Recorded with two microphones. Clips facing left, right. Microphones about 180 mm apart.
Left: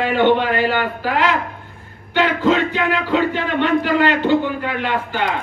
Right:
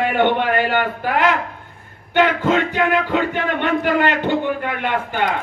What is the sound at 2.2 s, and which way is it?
Speech, 50° right (ahead or behind).